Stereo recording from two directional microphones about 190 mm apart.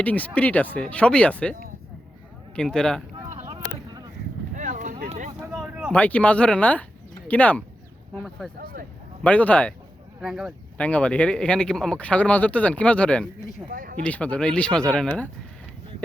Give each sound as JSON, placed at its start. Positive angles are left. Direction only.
{"t": 0.0, "sound": "speech", "side_deg": 10}
{"t": 2.6, "sound": "speech", "side_deg": 5}
{"t": 3.4, "sound": "boat", "side_deg": -20}
{"t": 4.5, "sound": "a sound", "side_deg": -40}
{"t": 5.5, "sound": "a sound", "side_deg": -5}
{"t": 5.9, "sound": "speech", "side_deg": 10}
{"t": 13.7, "sound": "speech", "side_deg": -50}
{"t": 13.9, "sound": "speech", "side_deg": 5}